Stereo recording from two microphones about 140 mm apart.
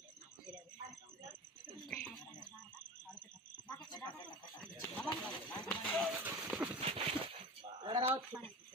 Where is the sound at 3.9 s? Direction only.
30° left (ahead or behind).